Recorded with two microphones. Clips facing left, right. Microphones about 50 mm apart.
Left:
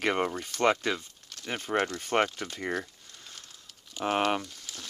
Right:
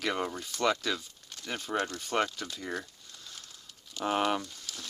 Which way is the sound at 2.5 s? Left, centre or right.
Left.